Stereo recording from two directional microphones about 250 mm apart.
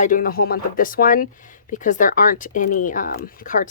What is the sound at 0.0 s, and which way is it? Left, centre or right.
Speech, left.